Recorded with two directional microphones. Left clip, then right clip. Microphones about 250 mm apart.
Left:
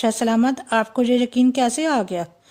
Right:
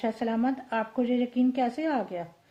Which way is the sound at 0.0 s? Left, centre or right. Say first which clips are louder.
Left 9 dB; left.